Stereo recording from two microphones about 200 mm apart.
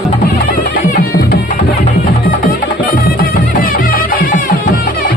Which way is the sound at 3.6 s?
45° left (ahead or behind).